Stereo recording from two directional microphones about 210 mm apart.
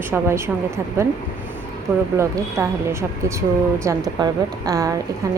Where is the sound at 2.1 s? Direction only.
15° right (ahead or behind).